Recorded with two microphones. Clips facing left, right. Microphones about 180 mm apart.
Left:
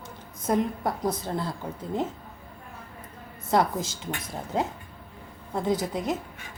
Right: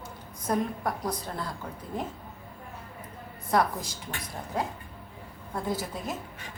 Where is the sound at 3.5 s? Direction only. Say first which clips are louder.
Left 2 dB; 25° left (ahead or behind).